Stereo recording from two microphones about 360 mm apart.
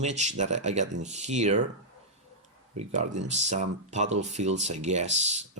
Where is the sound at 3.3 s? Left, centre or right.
Centre.